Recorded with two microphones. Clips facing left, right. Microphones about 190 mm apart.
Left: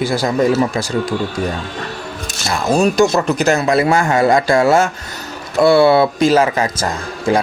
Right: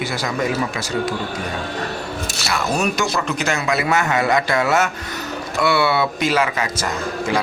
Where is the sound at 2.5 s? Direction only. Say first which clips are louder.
Left 7 dB; 30° left (ahead or behind).